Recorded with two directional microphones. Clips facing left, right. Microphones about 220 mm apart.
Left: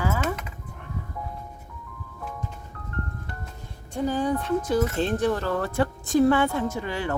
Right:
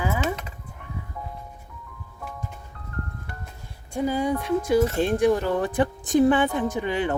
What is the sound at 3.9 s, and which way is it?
Speech, 10° right (ahead or behind).